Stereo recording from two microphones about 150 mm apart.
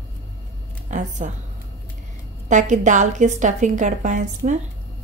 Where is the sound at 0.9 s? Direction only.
55° right (ahead or behind).